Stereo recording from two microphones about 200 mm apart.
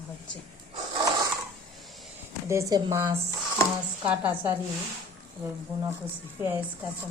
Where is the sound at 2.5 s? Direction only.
15° right (ahead or behind).